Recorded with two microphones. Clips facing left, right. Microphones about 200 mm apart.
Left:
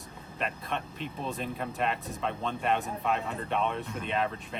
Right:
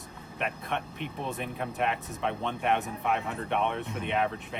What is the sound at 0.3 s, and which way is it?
Speech, 65° right (ahead or behind).